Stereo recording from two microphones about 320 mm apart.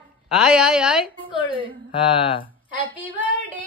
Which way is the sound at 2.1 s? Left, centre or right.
Centre.